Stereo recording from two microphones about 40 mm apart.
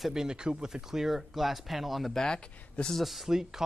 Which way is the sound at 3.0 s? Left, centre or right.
Centre.